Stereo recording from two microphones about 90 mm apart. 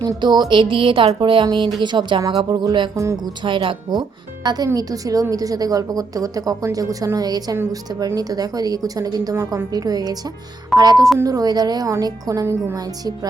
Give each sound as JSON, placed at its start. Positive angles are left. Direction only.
{"t": 0.2, "sound": "speech", "side_deg": -55}
{"t": 2.9, "sound": "music", "side_deg": -35}
{"t": 3.4, "sound": "speech", "side_deg": -65}
{"t": 4.4, "sound": "a woman's voice", "side_deg": -45}